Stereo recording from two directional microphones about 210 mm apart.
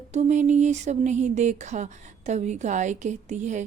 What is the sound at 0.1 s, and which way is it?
A woman's voice, 35° right (ahead or behind).